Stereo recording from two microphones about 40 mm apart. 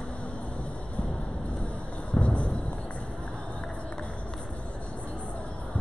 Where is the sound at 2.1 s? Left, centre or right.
Left.